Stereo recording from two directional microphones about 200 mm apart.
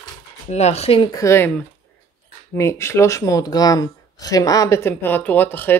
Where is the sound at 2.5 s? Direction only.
15° left (ahead or behind).